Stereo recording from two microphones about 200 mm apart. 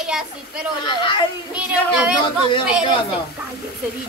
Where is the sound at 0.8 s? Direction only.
25° left (ahead or behind).